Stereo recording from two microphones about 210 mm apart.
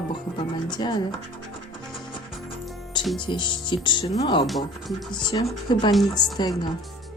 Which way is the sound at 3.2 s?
20° left (ahead or behind).